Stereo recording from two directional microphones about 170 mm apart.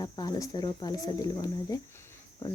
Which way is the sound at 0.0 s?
25° left (ahead or behind).